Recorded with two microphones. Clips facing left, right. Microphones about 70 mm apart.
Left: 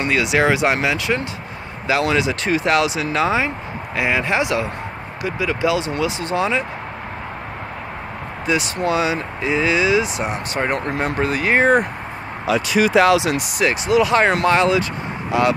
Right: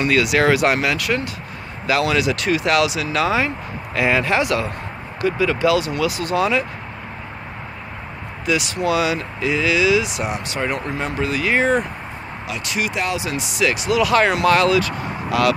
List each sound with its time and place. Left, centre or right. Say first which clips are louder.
0.0 s speech: right 1 dB; left
8.5 s speech: even; left
13.0 s speech: left 8 dB; left
13.4 s speech: left 1 dB; left
13.7 s speech: left 2 dB; left